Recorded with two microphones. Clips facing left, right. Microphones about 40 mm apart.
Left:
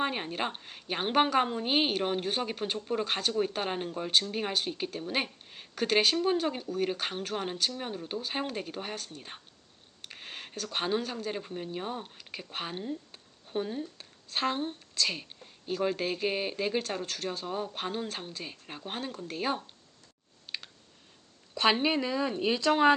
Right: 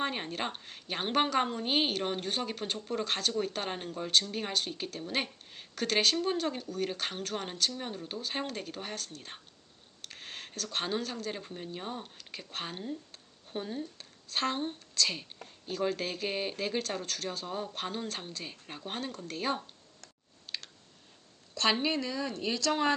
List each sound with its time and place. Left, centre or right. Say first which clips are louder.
0.0 s a woman's voice: left 2 dB; centre
20.5 s clicking: left 1 dB; centre
21.5 s speech: left 3 dB; centre